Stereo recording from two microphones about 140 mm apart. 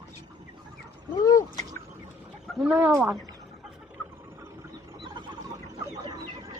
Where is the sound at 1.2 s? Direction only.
25° left (ahead or behind).